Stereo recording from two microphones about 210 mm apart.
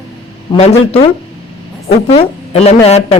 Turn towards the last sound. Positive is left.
turn(degrees=30)  # may be behind; listen again after turning